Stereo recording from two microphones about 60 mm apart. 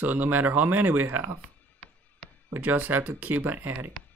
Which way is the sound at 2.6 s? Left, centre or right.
Right.